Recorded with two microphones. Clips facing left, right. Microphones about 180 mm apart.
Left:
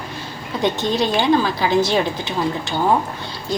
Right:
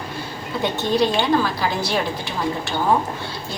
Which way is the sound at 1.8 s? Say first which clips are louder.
Left 4 dB; 20° left (ahead or behind).